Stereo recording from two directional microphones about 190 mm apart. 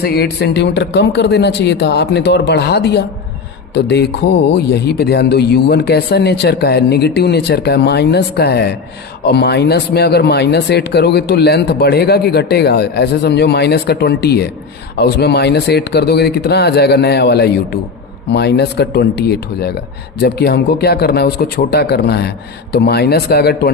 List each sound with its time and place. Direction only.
0.0 s speech: 60° left (ahead or behind)